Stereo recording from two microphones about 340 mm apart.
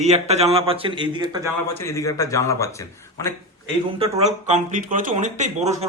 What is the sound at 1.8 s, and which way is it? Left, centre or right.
A man's voice, centre.